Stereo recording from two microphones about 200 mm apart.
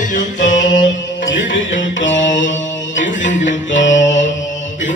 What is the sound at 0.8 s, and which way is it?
Music, 65° left (ahead or behind).